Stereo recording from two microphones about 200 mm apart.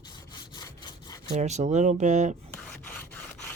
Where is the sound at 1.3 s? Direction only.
35° right (ahead or behind).